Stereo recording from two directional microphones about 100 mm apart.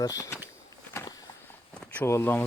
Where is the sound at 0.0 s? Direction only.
35° left (ahead or behind).